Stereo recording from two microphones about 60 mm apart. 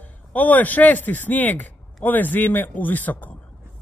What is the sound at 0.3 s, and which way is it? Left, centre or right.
A man's voice, left.